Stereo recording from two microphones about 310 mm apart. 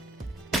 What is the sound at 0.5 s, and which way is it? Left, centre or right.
Music, centre.